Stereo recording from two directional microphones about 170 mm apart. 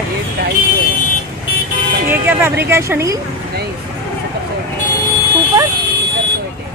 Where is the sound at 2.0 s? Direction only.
15° right (ahead or behind).